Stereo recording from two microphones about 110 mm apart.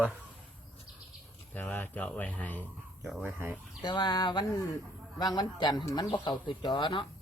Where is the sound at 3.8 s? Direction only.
40° left (ahead or behind).